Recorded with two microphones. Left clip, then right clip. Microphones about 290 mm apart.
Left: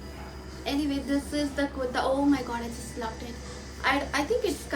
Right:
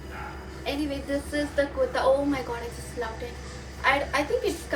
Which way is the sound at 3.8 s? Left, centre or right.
Centre.